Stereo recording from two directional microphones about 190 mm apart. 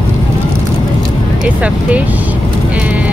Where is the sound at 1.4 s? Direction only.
5° right (ahead or behind).